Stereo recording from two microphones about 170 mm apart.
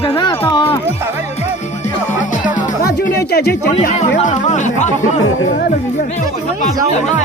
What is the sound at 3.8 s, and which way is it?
Speech, 45° left (ahead or behind).